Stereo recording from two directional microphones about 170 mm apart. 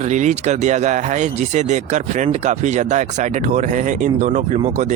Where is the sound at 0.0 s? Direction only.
45° right (ahead or behind).